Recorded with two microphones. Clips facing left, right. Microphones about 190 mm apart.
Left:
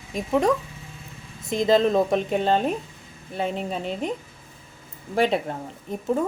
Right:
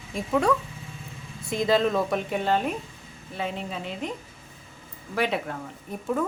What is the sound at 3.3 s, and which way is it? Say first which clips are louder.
Speech: left 4 dB; 45° left (ahead or behind).